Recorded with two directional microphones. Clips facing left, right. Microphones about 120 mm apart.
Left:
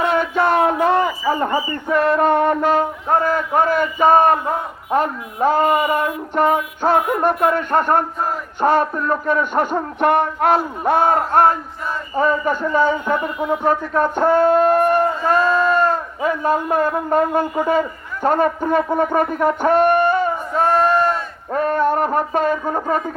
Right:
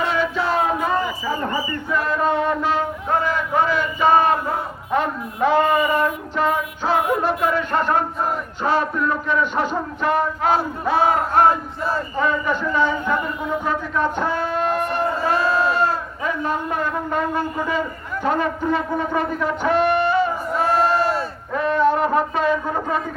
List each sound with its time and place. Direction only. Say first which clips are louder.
0.0 s music: left 4 dB; 50° left (ahead or behind); by 1.0 s 70° left (ahead or behind)
1.9 s music: left 6 dB; 60° left (ahead or behind)
3.2 s a man's voice: left 3 dB; 45° left (ahead or behind)
6.3 s a man's voice: left 4 dB; 55° left (ahead or behind)
13.7 s a sound: left 5 dB; 45° left (ahead or behind)